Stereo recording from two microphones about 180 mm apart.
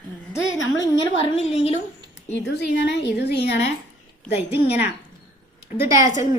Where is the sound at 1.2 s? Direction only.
35° left (ahead or behind).